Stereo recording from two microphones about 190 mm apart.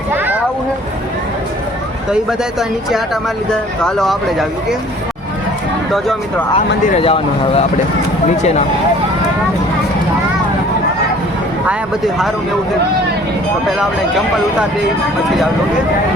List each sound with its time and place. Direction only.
3.5 s speech: 5° left (ahead or behind)
7.0 s speech: 30° left (ahead or behind)